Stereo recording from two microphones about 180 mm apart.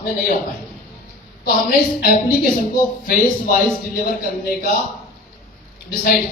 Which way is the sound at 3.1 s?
50° left (ahead or behind).